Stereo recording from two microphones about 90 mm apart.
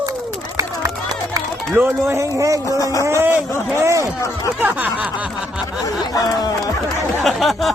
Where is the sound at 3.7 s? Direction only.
35° right (ahead or behind).